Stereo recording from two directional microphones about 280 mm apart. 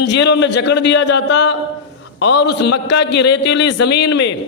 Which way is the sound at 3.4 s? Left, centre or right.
Left.